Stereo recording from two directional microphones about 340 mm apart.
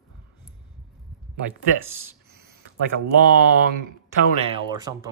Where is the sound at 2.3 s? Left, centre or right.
Right.